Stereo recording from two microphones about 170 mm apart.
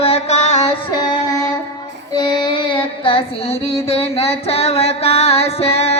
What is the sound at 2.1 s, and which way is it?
Music, 25° left (ahead or behind).